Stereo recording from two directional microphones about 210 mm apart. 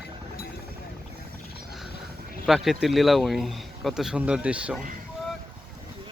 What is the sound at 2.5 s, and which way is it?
Speech, centre (ahead or behind).